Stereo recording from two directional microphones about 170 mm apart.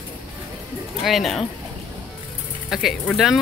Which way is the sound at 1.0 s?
Centre (ahead or behind).